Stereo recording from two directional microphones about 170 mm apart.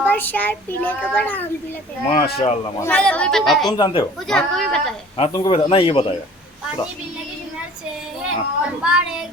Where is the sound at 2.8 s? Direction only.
10° left (ahead or behind).